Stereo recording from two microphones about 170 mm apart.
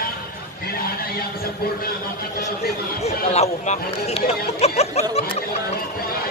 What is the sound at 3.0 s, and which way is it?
Speech, 40° left (ahead or behind).